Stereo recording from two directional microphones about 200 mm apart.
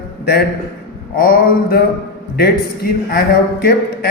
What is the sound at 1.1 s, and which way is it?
Speech, 45° left (ahead or behind).